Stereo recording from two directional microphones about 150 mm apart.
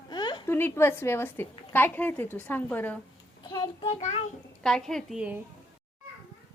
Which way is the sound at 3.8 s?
45° left (ahead or behind).